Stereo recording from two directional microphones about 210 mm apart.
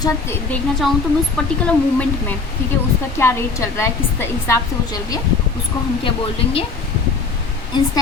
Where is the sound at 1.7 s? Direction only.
5° left (ahead or behind).